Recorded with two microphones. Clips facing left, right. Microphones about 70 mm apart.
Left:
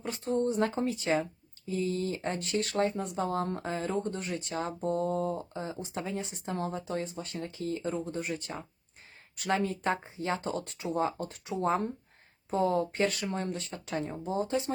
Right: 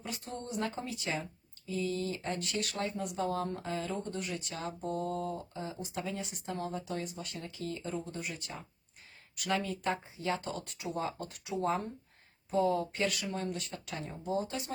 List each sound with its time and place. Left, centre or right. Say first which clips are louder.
0.0 s speech: left 11 dB; left